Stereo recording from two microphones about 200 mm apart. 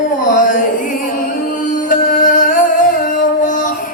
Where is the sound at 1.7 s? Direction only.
40° left (ahead or behind).